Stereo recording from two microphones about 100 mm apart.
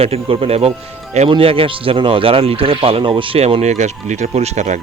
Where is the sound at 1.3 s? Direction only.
70° right (ahead or behind); by 4.5 s 90° right.